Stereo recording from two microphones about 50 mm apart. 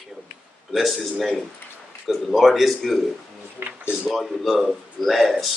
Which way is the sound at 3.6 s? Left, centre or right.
Right.